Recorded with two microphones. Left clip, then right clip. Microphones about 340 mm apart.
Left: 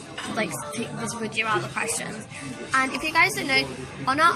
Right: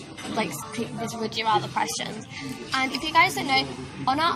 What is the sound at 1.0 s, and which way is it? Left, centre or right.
A woman's voice, right.